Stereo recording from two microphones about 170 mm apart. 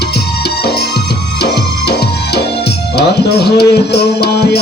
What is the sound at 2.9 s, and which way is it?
Music, 70° left (ahead or behind).